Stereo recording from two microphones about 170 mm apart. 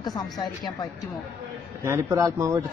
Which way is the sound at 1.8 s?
15° right (ahead or behind).